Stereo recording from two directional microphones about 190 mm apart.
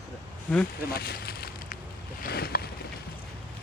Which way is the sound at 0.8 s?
55° left (ahead or behind).